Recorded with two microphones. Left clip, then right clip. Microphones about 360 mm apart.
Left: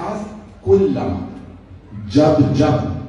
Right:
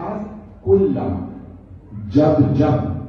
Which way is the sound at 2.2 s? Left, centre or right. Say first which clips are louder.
Left 2 dB; centre.